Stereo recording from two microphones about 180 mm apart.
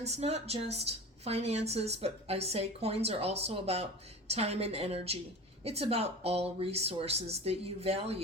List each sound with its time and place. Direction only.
0.0 s a woman's voice: 35° right (ahead or behind)